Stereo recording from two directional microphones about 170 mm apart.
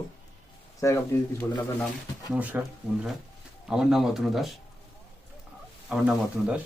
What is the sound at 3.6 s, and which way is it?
Speech, 5° right (ahead or behind).